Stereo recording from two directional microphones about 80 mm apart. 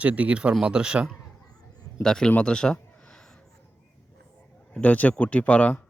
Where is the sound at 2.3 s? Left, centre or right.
Centre.